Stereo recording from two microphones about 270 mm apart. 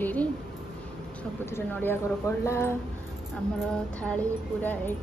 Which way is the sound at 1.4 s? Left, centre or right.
Centre.